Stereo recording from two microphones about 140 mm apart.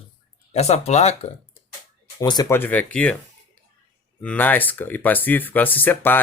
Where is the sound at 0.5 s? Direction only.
50° left (ahead or behind).